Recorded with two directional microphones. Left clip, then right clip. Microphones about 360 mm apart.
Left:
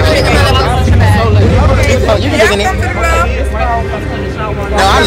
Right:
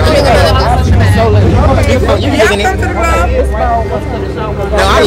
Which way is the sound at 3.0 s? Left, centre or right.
Right.